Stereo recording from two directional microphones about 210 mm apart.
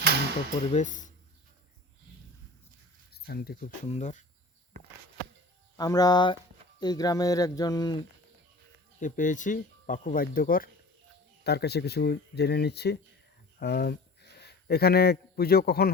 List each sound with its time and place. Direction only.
0.7 s speech: 35° left (ahead or behind)
3.1 s speech: 45° left (ahead or behind)
3.8 s speech: 35° left (ahead or behind)
5.7 s speech: 15° left (ahead or behind)
9.0 s speech: 35° left (ahead or behind)